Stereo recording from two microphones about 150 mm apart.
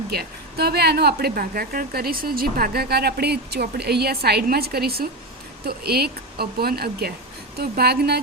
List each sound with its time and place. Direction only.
0.1 s speech: 90° right